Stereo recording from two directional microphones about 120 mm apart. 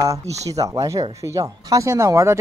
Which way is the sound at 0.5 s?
25° right (ahead or behind).